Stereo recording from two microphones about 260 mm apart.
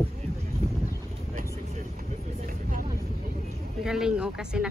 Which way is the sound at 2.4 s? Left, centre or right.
Right.